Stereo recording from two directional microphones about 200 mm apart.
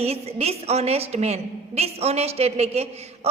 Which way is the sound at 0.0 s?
30° right (ahead or behind).